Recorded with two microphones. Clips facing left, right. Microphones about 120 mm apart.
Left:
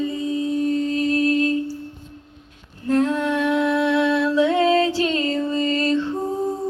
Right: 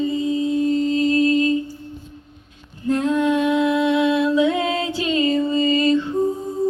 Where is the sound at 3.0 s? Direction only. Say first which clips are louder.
Right 3 dB; 10° right (ahead or behind).